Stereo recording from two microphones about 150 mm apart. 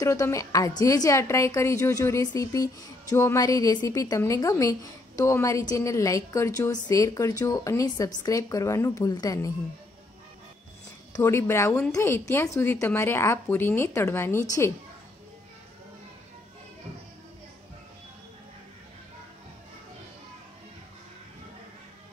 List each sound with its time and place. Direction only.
0.0 s a woman's voice: 20° left (ahead or behind)
11.1 s a woman's voice: 15° left (ahead or behind)